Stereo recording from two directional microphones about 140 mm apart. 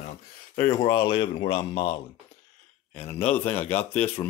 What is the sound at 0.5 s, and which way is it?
Speech, 15° left (ahead or behind).